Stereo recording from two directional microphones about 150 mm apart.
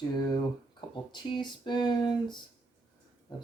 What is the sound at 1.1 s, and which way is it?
Speech, 30° left (ahead or behind).